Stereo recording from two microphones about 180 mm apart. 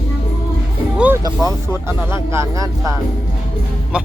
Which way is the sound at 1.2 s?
15° right (ahead or behind).